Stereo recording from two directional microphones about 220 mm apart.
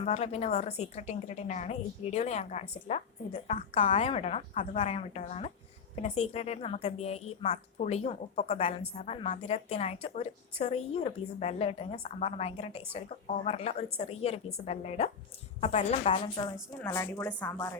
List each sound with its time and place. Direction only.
0.0 s a woman's voice: 30° left (ahead or behind)
16.8 s speech: 15° left (ahead or behind)